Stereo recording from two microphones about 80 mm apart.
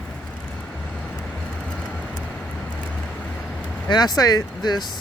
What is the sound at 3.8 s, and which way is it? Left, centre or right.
Speech, left.